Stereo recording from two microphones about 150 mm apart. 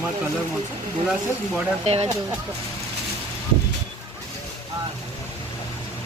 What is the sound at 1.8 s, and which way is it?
Speech, 45° right (ahead or behind).